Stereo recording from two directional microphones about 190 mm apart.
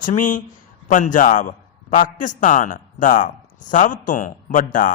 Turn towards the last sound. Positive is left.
turn(degrees=45)  # may be behind; listen again after turning